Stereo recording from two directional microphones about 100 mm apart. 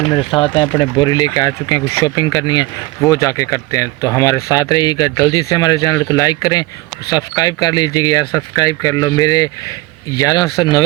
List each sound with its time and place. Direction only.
0.3 s speech: 60° left (ahead or behind); by 10.8 s 40° left (ahead or behind)